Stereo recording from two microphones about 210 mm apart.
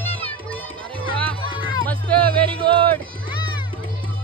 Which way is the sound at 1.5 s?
70° right (ahead or behind).